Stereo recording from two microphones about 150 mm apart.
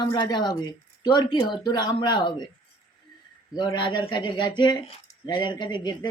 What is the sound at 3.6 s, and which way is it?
Speech, 30° left (ahead or behind).